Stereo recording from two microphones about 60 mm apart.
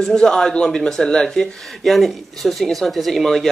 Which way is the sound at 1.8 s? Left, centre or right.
Centre.